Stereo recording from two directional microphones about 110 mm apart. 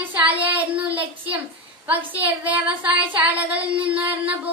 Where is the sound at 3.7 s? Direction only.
55° right (ahead or behind).